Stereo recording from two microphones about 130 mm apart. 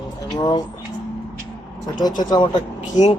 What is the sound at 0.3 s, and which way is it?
Speech, 35° left (ahead or behind).